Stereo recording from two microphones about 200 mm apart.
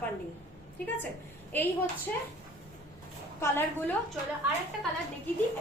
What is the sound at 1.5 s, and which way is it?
Speech, 10° left (ahead or behind).